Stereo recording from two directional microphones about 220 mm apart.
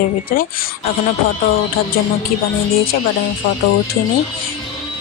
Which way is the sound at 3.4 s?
50° left (ahead or behind).